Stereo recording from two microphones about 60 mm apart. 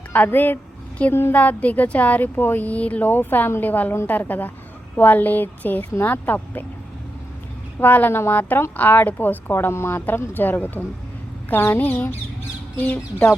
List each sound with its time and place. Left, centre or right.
0.1 s speech: left
2.6 s speech: left
7.8 s speech: left